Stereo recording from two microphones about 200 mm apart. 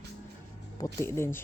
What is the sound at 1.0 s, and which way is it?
Speech, 10° left (ahead or behind).